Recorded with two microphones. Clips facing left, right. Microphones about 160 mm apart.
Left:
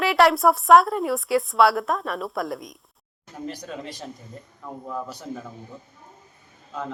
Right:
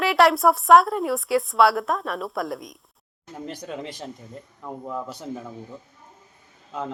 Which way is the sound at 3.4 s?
25° right (ahead or behind).